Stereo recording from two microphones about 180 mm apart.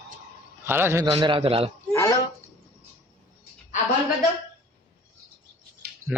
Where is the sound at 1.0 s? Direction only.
25° right (ahead or behind).